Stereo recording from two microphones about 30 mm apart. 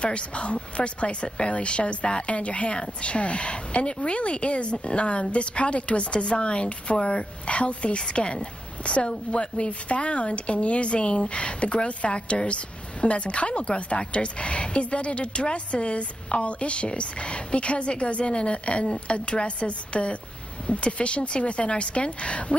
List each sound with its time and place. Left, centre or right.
0.0 s a woman's voice: left
6.2 s a woman's voice: left